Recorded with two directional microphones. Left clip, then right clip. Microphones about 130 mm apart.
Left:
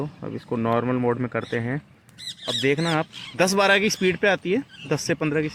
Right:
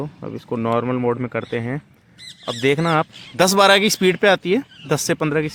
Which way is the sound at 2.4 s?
50° right (ahead or behind).